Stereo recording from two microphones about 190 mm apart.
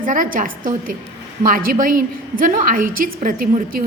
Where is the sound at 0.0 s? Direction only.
45° right (ahead or behind).